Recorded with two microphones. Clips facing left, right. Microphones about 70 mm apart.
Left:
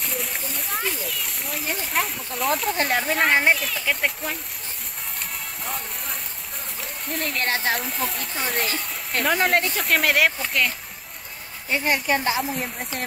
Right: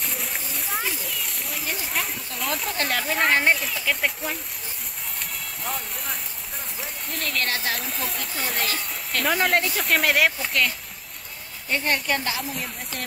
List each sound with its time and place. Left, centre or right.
0.0 s splash: centre
2.8 s a woman's voice: centre
3.1 s a woman's voice: centre
5.6 s speech: centre
6.8 s rain on surface: centre
7.3 s a woman's voice: left
7.7 s speech: centre
11.7 s a woman's voice: centre
12.2 s a woman's voice: left